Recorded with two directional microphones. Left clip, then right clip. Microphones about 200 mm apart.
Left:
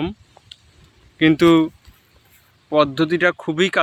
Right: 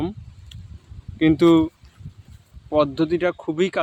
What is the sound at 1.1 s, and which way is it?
Speech, centre (ahead or behind).